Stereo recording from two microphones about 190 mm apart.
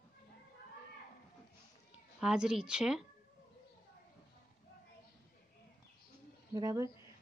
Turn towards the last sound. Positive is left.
turn(degrees=-15)  # may be behind; listen again after turning